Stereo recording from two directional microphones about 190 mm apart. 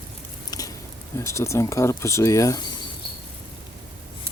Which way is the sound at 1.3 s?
15° left (ahead or behind).